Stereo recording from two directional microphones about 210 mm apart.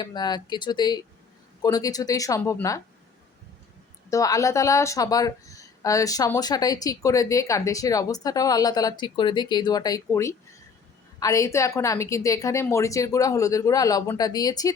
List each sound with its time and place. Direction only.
0.0 s speech: 20° left (ahead or behind)
4.1 s speech: 15° left (ahead or behind)